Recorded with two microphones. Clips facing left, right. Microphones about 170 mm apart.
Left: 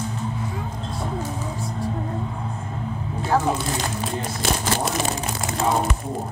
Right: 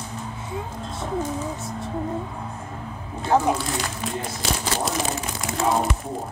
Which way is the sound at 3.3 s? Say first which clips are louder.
Right 1 dB; 20° right (ahead or behind).